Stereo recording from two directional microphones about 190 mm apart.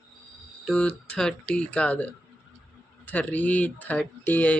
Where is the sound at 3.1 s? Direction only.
10° left (ahead or behind).